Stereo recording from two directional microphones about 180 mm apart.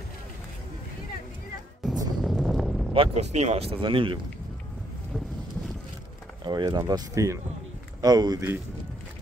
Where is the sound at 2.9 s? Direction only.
35° right (ahead or behind).